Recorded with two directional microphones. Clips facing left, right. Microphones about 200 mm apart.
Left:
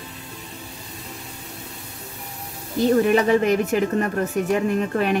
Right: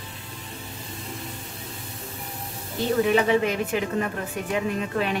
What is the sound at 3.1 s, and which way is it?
A woman's voice, 45° left (ahead or behind).